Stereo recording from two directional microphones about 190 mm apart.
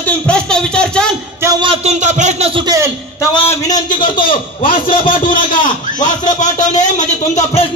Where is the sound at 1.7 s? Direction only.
35° right (ahead or behind).